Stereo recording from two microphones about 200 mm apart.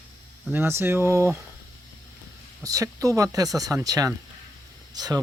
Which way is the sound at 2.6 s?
15° right (ahead or behind).